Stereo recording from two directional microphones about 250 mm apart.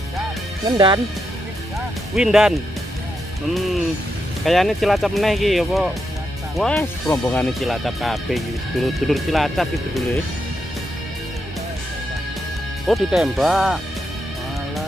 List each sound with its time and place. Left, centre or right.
0.7 s speech: centre
2.1 s speech: centre
4.5 s speech: centre
12.8 s speech: centre